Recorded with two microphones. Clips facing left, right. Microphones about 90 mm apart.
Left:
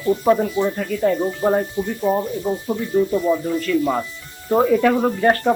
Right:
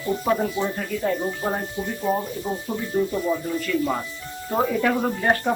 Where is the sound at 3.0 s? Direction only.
10° right (ahead or behind).